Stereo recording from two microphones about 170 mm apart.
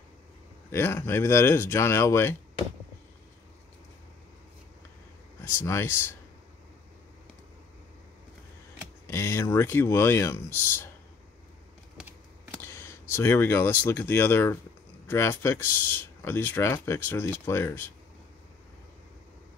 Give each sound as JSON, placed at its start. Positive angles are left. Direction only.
{"t": 0.7, "sound": "speech", "side_deg": 15}
{"t": 5.6, "sound": "speech", "side_deg": 15}
{"t": 9.0, "sound": "speech", "side_deg": 15}
{"t": 12.6, "sound": "computer keyboard", "side_deg": 15}
{"t": 13.1, "sound": "speech", "side_deg": 15}